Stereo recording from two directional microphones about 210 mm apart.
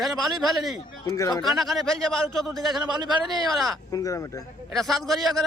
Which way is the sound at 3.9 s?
15° left (ahead or behind).